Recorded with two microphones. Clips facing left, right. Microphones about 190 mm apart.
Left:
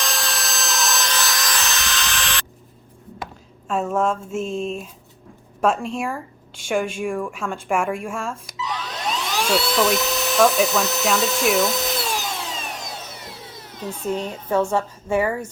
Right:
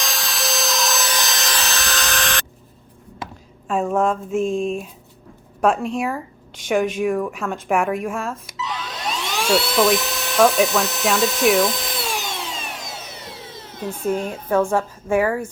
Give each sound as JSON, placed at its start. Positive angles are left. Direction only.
{"t": 0.0, "sound": "wood", "side_deg": 0}
{"t": 1.6, "sound": "tools", "side_deg": -35}
{"t": 3.8, "sound": "a woman's voice", "side_deg": -5}
{"t": 8.0, "sound": "dental drill", "side_deg": -5}
{"t": 14.0, "sound": "a woman's voice", "side_deg": -10}